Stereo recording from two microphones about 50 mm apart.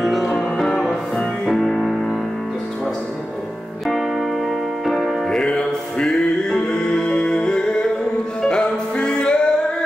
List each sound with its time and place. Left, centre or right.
0.0 s music: centre
3.8 s music: centre
5.3 s music: centre